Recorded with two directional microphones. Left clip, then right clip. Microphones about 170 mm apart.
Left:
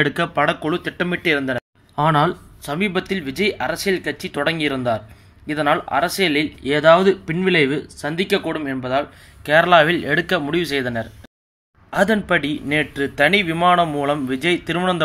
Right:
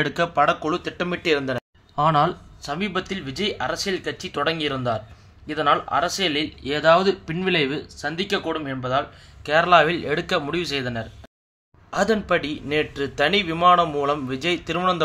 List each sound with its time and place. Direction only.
0.0 s speech: 10° left (ahead or behind)
2.0 s speech: 25° left (ahead or behind)
11.9 s speech: 20° left (ahead or behind)